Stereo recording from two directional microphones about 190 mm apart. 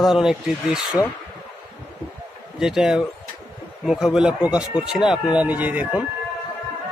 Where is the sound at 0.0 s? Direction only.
Centre (ahead or behind).